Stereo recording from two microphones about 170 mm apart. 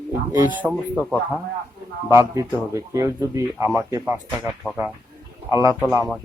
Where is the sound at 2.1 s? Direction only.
15° right (ahead or behind).